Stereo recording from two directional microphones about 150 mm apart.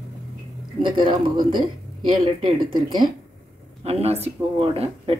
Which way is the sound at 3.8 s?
45° right (ahead or behind).